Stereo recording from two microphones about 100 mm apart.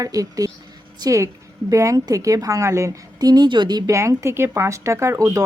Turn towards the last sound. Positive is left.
turn(degrees=-35)  # may be behind; listen again after turning